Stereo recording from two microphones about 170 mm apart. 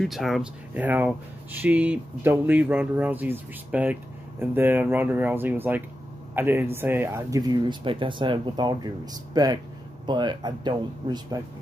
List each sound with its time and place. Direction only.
0.0 s speech: centre (ahead or behind); by 11.4 s 25° right (ahead or behind)